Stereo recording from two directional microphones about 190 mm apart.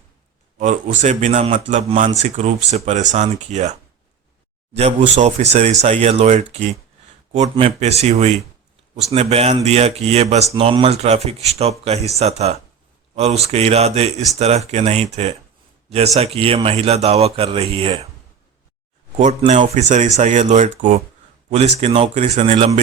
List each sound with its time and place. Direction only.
0.6 s a man's voice: 40° right (ahead or behind)
19.2 s a man's voice: 35° right (ahead or behind)